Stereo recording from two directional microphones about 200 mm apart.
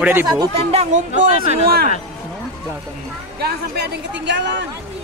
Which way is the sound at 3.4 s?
55° right (ahead or behind).